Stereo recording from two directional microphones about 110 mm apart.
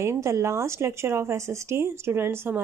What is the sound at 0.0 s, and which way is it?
A woman's voice, 25° right (ahead or behind).